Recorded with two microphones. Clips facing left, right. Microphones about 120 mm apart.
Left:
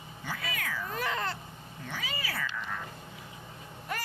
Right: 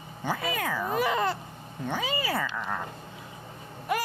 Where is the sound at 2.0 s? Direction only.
25° right (ahead or behind).